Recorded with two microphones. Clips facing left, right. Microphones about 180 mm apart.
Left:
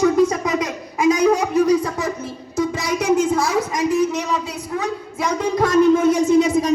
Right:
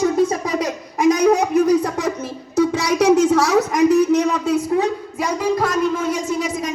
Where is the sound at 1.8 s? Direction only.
70° right (ahead or behind); by 4.5 s 50° right (ahead or behind).